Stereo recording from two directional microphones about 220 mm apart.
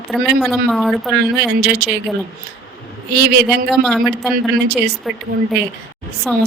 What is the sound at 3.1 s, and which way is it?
Speech, 50° right (ahead or behind).